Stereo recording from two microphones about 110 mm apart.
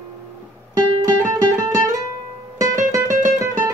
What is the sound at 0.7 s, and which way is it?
Music, 35° right (ahead or behind).